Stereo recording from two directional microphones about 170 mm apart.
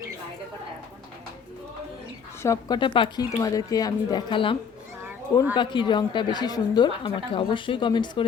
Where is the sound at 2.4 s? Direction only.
20° left (ahead or behind).